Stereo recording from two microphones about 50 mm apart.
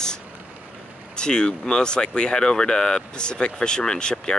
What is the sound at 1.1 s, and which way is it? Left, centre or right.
Speech, centre.